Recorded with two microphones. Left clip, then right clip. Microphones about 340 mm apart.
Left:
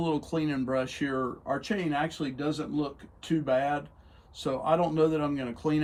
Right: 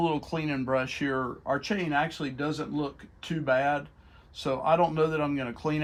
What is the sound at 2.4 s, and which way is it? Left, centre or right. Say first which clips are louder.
Speech: right 1 dB; right.